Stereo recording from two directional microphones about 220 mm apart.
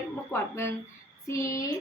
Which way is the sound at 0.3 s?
10° left (ahead or behind).